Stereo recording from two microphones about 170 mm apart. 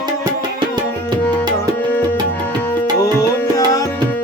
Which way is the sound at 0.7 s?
25° right (ahead or behind).